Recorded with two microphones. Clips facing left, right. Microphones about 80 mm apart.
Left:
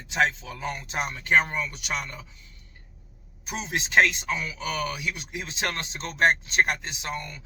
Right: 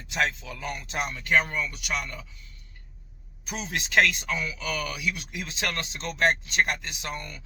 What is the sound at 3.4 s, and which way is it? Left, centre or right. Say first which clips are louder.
Speech: left 2 dB; left.